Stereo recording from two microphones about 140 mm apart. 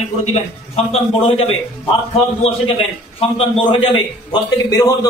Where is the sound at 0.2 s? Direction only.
45° left (ahead or behind).